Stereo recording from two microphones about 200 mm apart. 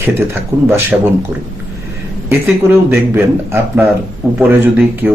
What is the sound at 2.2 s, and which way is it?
Speech, 10° right (ahead or behind).